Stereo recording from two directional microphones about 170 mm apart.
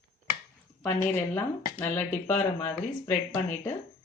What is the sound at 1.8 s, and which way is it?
Speech, 10° left (ahead or behind).